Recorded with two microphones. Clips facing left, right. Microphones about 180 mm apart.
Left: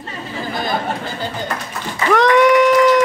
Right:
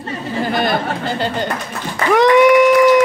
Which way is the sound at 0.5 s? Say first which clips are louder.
Right 2 dB; 75° right (ahead or behind).